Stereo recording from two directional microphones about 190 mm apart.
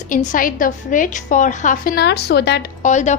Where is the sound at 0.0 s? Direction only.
45° left (ahead or behind); by 2.7 s 60° left (ahead or behind).